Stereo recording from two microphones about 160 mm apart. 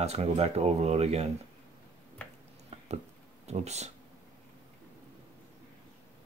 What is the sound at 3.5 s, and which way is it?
Speech, 45° right (ahead or behind).